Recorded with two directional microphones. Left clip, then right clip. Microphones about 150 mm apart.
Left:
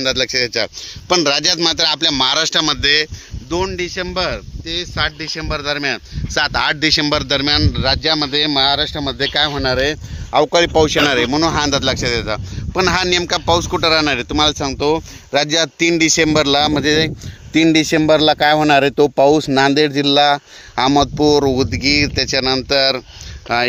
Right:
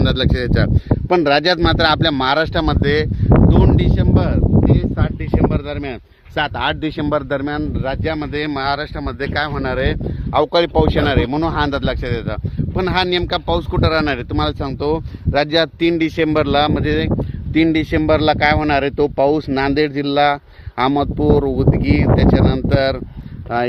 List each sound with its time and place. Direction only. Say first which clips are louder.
0.0 s speech: left 3 dB; 70° right (ahead or behind)
1.1 s speech: right 1 dB; 45° right (ahead or behind)
3.5 s speech: right 2 dB; 20° right (ahead or behind)
4.7 s speech: left 2 dB; 25° left (ahead or behind)
23.5 s speech: left 2 dB; 20° left (ahead or behind)